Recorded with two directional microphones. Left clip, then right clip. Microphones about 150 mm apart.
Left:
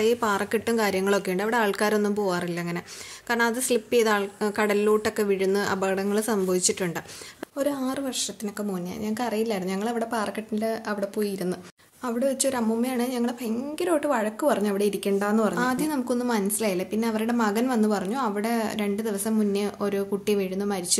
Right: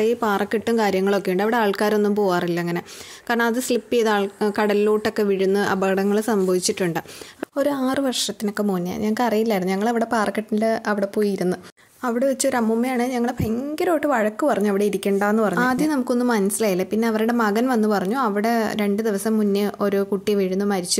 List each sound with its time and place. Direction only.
0.0 s a woman's voice: 35° right (ahead or behind)
7.5 s a woman's voice: 55° right (ahead or behind)